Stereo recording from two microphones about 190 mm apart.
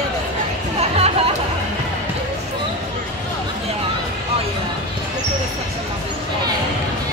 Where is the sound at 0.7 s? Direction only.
35° right (ahead or behind).